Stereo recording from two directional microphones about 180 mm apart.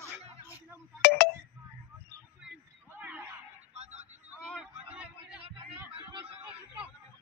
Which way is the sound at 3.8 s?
40° right (ahead or behind).